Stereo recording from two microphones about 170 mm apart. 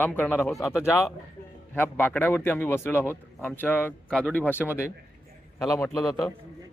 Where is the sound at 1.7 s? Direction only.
10° left (ahead or behind).